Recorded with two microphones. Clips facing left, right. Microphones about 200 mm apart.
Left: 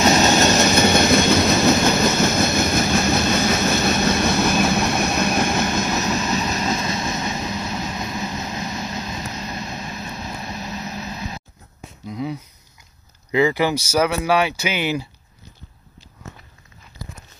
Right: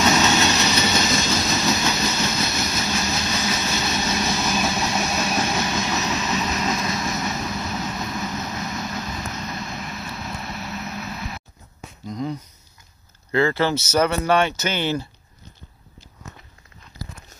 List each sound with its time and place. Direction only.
0.0 s train: 45° left (ahead or behind)
6.3 s vehicle: 30° left (ahead or behind)
12.1 s a sound: 5° left (ahead or behind)
13.3 s speech: 15° left (ahead or behind)